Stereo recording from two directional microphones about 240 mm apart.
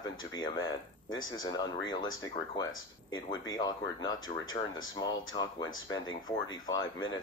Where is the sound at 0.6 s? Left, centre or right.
Left.